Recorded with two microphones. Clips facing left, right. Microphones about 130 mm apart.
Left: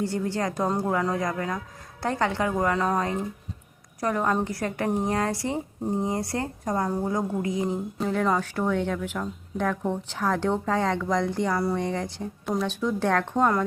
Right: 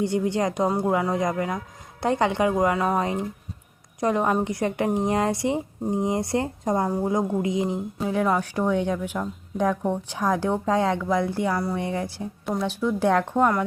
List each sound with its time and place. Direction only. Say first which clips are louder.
0.0 s a woman's voice: right 4 dB; 20° right (ahead or behind)